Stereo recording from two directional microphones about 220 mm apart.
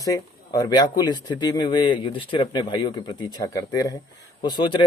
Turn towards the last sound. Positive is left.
turn(degrees=20)  # may be behind; listen again after turning